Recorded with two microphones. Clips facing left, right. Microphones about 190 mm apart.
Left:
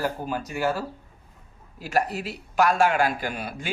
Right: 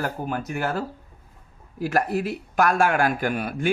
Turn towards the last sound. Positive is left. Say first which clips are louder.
# right 6 dB
turn(degrees=-55)  # may be behind; listen again after turning